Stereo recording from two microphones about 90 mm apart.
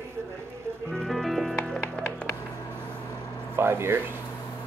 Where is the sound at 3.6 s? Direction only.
25° right (ahead or behind).